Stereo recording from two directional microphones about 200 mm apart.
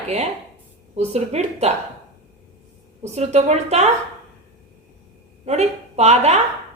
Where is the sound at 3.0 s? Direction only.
35° right (ahead or behind).